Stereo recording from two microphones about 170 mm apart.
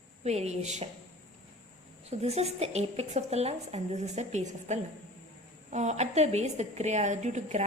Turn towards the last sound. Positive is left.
turn(degrees=-40)  # may be behind; listen again after turning